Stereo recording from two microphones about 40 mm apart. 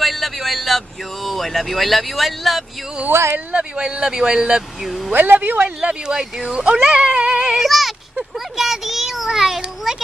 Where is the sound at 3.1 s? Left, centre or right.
Right.